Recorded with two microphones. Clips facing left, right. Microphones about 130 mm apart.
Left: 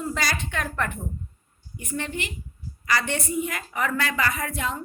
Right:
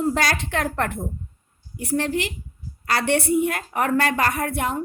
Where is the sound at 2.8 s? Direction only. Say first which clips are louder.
Right 5 dB; 65° right (ahead or behind).